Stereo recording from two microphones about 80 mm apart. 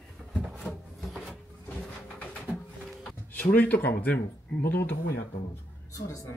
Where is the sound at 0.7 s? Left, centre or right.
Centre.